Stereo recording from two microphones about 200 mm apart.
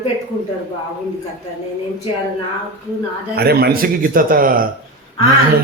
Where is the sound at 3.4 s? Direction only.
50° right (ahead or behind).